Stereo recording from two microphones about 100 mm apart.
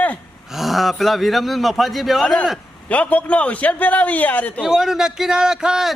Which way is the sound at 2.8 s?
15° left (ahead or behind).